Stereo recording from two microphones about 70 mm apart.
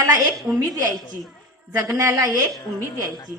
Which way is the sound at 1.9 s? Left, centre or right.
Right.